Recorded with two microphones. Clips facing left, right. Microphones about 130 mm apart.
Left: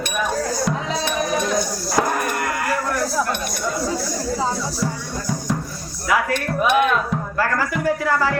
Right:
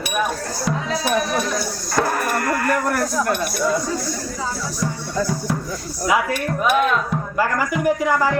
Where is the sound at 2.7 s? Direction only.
55° right (ahead or behind).